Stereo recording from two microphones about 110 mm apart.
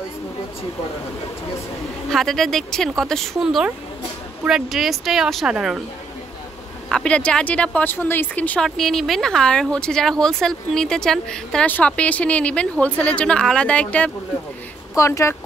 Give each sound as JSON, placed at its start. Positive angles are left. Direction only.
{"t": 2.0, "sound": "speech", "side_deg": 5}
{"t": 6.9, "sound": "speech", "side_deg": 10}
{"t": 8.6, "sound": "speech", "side_deg": 0}
{"t": 15.0, "sound": "speech", "side_deg": 25}